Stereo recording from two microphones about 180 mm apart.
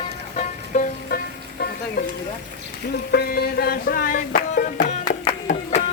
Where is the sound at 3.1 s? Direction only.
60° left (ahead or behind).